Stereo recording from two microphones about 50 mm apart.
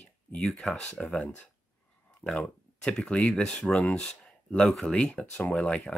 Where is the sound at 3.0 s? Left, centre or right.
Left.